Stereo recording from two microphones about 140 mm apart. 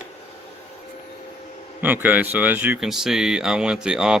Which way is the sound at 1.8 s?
15° right (ahead or behind).